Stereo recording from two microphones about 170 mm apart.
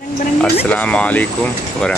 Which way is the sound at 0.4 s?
10° left (ahead or behind).